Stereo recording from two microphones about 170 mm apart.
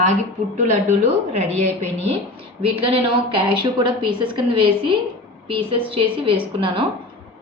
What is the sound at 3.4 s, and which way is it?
A woman's voice, 30° right (ahead or behind).